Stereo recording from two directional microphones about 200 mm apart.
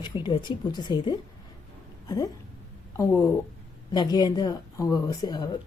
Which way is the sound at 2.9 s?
15° left (ahead or behind).